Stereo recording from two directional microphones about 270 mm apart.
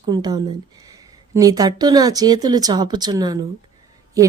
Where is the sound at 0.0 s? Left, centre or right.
Centre.